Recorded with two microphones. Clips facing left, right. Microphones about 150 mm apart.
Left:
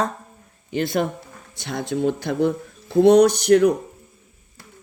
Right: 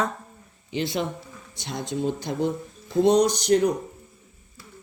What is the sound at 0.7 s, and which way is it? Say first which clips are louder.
A woman's voice: left 5 dB; 50° left (ahead or behind).